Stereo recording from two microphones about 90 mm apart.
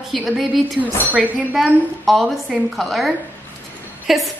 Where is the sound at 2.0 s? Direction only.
Centre (ahead or behind).